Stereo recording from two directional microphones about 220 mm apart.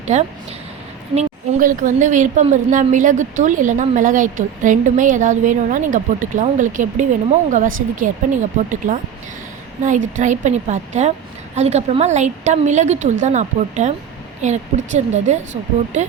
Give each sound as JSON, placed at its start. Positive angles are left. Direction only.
{"t": 0.1, "sound": "a woman's voice", "side_deg": -30}